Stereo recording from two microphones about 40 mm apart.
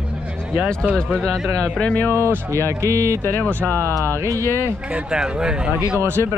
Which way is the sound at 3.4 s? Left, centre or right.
Left.